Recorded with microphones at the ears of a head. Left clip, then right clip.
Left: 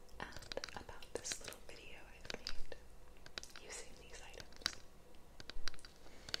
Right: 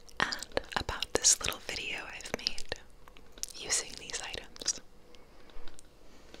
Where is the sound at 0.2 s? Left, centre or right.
Right.